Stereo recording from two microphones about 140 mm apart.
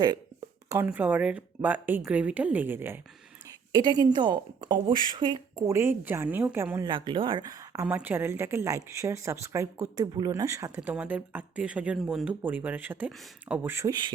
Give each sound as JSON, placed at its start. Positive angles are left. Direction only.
{"t": 0.9, "sound": "speech", "side_deg": -10}
{"t": 3.7, "sound": "a woman's voice", "side_deg": -30}
{"t": 6.9, "sound": "speech", "side_deg": -35}
{"t": 7.9, "sound": "a woman's voice", "side_deg": -10}
{"t": 10.9, "sound": "speech", "side_deg": -10}